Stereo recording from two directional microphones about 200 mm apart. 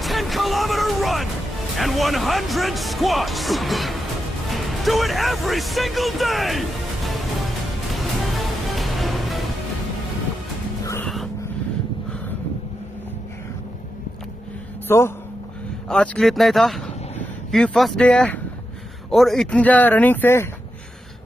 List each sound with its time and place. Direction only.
0.0 s music: centre (ahead or behind)
1.8 s speech: centre (ahead or behind)
7.9 s music: centre (ahead or behind)
14.9 s speech: 10° left (ahead or behind)